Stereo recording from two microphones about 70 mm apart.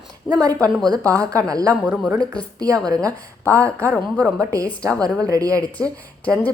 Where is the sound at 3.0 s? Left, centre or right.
Right.